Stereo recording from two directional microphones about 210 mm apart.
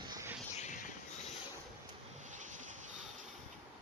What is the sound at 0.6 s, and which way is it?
Vehicle, 35° left (ahead or behind).